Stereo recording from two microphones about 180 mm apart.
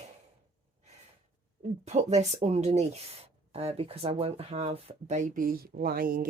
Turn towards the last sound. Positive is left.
turn(degrees=-50)  # may be behind; listen again after turning